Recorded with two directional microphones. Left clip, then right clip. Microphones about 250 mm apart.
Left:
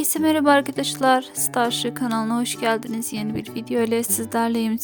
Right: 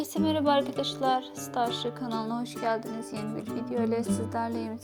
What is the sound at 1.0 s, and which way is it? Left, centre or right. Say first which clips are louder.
Speech: left 10 dB; left.